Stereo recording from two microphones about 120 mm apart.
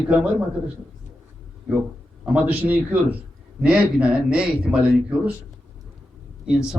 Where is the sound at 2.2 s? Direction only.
10° right (ahead or behind).